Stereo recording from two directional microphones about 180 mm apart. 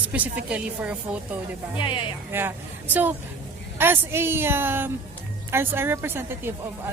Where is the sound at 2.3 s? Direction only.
10° right (ahead or behind).